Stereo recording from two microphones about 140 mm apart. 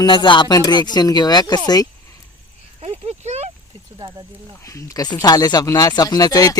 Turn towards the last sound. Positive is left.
turn(degrees=25)  # may be behind; listen again after turning